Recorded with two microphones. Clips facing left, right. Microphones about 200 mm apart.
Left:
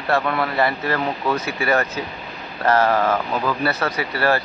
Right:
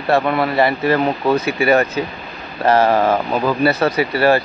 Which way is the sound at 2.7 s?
30° right (ahead or behind).